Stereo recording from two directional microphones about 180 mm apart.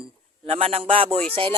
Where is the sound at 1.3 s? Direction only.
30° right (ahead or behind).